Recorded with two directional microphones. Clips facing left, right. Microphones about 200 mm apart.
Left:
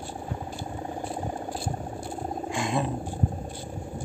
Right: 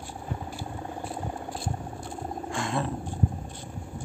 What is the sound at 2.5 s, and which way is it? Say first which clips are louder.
Roaring cats: left 2 dB; 15° left (ahead or behind).